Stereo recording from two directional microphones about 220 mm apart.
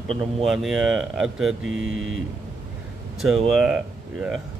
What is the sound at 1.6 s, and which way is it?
Speech, 65° right (ahead or behind).